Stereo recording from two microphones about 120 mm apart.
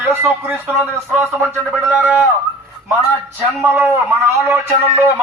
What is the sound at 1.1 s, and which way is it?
Speech, 20° right (ahead or behind).